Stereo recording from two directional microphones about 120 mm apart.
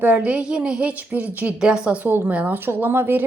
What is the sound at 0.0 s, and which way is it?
A woman's voice, 10° right (ahead or behind).